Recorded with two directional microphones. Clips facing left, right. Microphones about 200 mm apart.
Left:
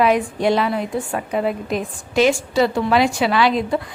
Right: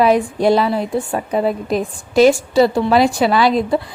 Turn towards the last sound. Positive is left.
turn(degrees=-40)  # may be behind; listen again after turning